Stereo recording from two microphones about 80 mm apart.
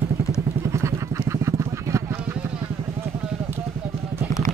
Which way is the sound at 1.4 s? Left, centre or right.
Right.